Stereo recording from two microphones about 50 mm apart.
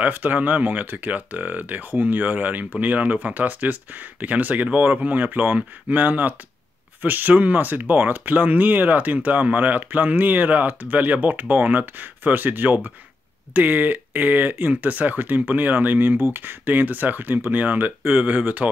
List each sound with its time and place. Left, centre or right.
0.0 s speech: right